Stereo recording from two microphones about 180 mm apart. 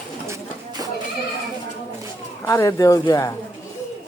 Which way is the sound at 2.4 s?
15° left (ahead or behind).